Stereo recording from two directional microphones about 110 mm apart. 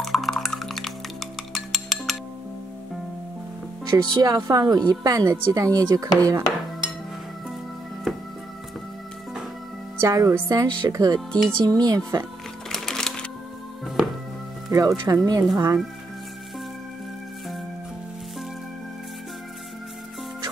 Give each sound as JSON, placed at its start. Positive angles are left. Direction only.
{"t": 0.0, "sound": "music", "side_deg": 0}
{"t": 3.9, "sound": "speech", "side_deg": -30}
{"t": 9.9, "sound": "speech", "side_deg": -30}
{"t": 11.1, "sound": "speech", "side_deg": 5}
{"t": 11.6, "sound": "speech", "side_deg": -35}
{"t": 12.6, "sound": "music", "side_deg": 5}
{"t": 14.7, "sound": "speech", "side_deg": -30}